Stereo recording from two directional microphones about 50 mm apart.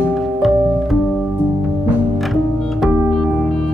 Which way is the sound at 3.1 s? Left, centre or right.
Centre.